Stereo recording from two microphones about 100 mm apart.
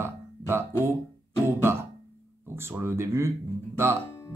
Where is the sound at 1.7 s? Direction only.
25° right (ahead or behind).